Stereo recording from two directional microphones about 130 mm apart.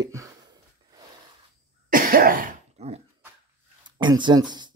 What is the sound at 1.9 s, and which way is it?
Cough, 90° right.